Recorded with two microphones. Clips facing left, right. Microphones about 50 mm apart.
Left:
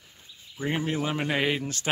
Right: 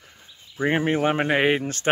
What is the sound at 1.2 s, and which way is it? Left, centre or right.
Speech, right.